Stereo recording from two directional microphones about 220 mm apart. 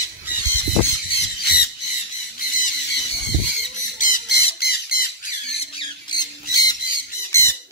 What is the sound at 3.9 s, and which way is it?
Squawk, 35° left (ahead or behind).